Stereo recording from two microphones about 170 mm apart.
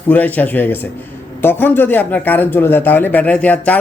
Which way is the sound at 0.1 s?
10° left (ahead or behind).